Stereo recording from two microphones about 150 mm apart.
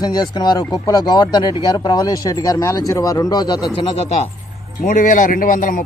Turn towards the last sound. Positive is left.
turn(degrees=60)  # may be behind; listen again after turning